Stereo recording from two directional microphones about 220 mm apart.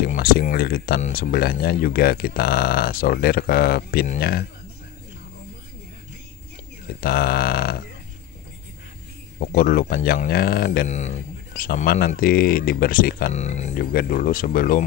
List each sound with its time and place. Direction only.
0.0 s speech: 45° left (ahead or behind)
7.0 s speech: 45° left (ahead or behind)
9.4 s speech: 40° left (ahead or behind)